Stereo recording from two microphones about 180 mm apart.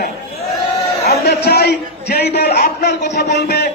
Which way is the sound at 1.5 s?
65° left (ahead or behind).